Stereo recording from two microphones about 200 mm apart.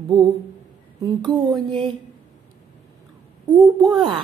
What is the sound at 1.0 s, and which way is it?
Speech, 20° right (ahead or behind).